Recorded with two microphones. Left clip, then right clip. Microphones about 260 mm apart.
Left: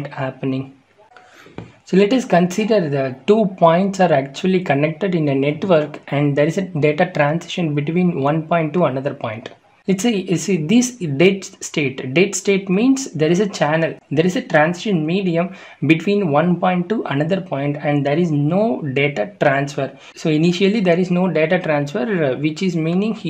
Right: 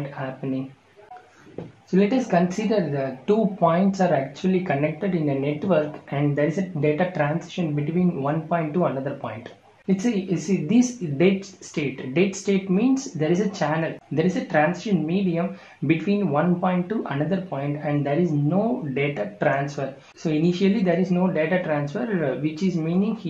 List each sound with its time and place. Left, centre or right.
1.9 s speech: left